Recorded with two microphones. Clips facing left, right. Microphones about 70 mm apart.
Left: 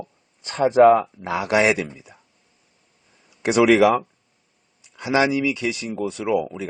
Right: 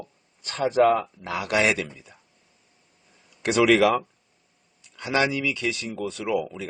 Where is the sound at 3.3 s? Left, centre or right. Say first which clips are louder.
Left 3 dB; centre.